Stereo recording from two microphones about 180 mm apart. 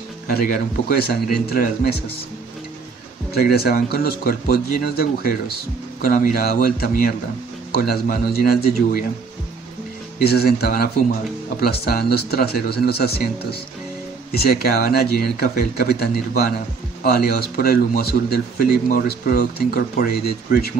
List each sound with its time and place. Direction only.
0.3 s speech: 60° left (ahead or behind)
3.5 s a man's voice: 60° left (ahead or behind)
10.2 s speech: 60° left (ahead or behind)